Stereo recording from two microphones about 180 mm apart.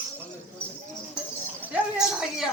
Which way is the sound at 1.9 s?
5° right (ahead or behind).